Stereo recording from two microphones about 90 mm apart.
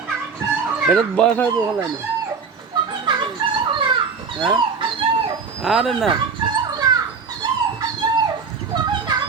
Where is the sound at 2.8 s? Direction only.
65° right (ahead or behind).